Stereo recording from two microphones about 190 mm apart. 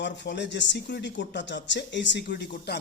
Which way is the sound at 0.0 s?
65° left (ahead or behind).